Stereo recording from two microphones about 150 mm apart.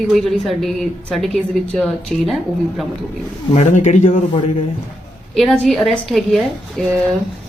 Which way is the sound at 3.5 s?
50° left (ahead or behind).